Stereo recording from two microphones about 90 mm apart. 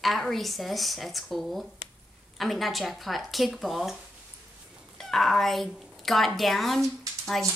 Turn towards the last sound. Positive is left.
turn(degrees=0)  # may be behind; listen again after turning